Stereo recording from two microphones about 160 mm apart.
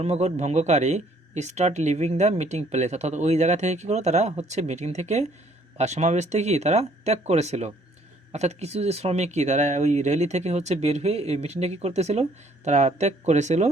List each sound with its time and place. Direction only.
0.0 s speech: 45° right (ahead or behind)